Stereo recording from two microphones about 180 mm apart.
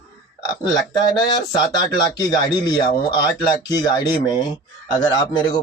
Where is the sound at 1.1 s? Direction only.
25° left (ahead or behind).